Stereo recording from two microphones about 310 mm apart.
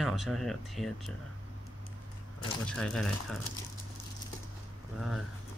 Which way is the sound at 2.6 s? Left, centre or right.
Centre.